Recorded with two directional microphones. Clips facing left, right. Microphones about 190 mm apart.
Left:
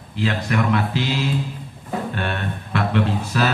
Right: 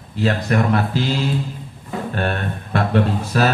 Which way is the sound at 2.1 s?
45° right (ahead or behind).